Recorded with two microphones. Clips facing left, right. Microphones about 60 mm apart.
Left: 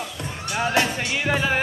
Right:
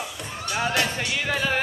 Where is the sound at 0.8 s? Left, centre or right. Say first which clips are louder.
Left 3 dB; centre.